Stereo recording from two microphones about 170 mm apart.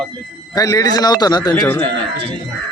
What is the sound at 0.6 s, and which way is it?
Speech, 20° left (ahead or behind).